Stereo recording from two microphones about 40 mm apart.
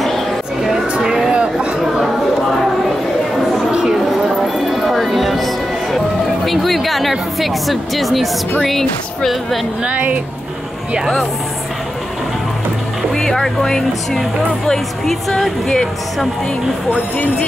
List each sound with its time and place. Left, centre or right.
1.0 s a sound: centre
4.3 s music: centre
6.4 s a sound: centre
8.6 s speech: centre
9.8 s a woman's voice: right
13.1 s speech: centre
15.0 s speech: centre